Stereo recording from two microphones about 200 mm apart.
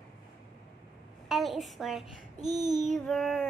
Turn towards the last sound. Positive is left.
turn(degrees=0)  # may be behind; listen again after turning